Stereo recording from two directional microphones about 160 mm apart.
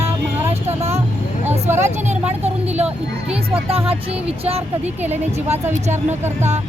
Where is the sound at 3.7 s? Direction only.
35° right (ahead or behind).